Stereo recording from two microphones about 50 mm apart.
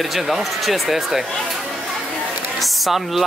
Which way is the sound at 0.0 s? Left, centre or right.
Centre.